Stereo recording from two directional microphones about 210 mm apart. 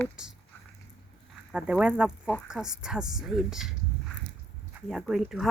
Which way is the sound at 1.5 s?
5° right (ahead or behind).